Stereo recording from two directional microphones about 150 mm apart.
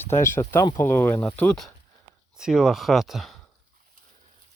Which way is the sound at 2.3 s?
5° right (ahead or behind).